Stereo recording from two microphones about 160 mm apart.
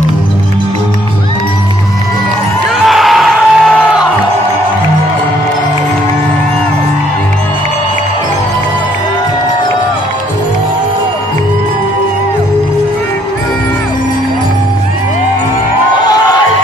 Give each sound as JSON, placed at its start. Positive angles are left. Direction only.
{"t": 2.9, "sound": "music", "side_deg": 0}
{"t": 16.0, "sound": "music", "side_deg": 25}